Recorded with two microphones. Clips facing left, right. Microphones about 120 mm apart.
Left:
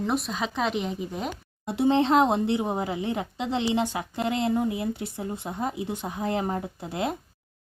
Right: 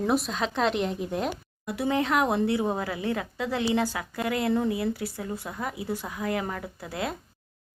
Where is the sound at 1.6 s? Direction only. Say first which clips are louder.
Left 5 dB; 25° left (ahead or behind).